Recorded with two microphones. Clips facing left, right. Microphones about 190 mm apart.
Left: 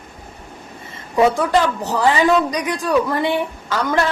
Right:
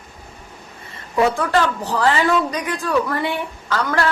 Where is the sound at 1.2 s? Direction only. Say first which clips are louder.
Left 2 dB; 15° left (ahead or behind).